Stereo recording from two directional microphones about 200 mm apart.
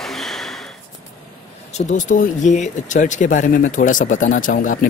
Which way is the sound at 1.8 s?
45° left (ahead or behind).